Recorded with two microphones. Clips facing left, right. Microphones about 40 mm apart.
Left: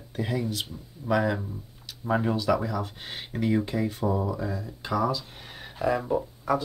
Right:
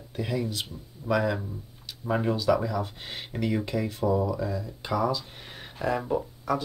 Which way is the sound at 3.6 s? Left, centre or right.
Centre.